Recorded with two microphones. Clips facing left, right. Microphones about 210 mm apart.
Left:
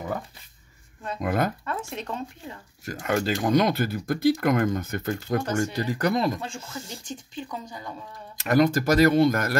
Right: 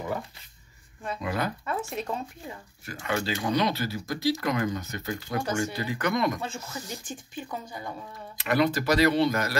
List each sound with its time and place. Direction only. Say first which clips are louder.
1.2 s speech: left 5 dB; 50° left (ahead or behind)
1.7 s speech: right 1 dB; 5° right (ahead or behind)
2.8 s speech: left 5 dB; 45° left (ahead or behind)
7.1 s speech: left 1 dB; 10° right (ahead or behind)
8.4 s speech: left 4 dB; 45° left (ahead or behind)